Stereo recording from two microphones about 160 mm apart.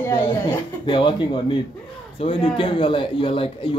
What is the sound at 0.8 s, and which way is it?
Speech, 30° left (ahead or behind).